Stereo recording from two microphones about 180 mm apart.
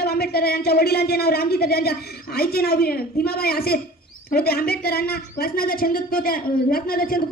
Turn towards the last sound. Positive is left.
turn(degrees=55)  # may be behind; listen again after turning